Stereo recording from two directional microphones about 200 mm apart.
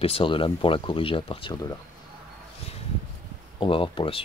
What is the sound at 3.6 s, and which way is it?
Speech, 25° left (ahead or behind).